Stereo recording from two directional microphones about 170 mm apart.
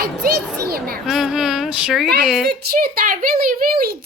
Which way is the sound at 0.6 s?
60° right (ahead or behind).